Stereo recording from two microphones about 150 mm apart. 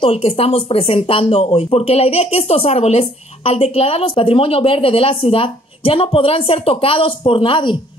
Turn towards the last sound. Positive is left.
turn(degrees=35)  # may be behind; listen again after turning